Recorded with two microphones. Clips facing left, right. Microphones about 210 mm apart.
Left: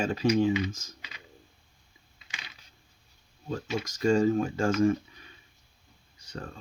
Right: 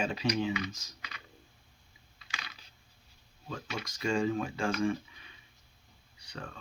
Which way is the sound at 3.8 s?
45° left (ahead or behind).